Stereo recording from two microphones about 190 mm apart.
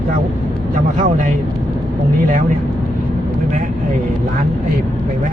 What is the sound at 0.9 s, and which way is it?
Speech, 45° right (ahead or behind).